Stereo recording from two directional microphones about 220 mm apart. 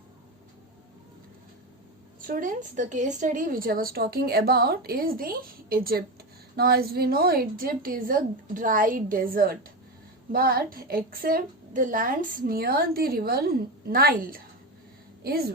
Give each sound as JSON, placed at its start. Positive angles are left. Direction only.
{"t": 2.2, "sound": "a woman's voice", "side_deg": -35}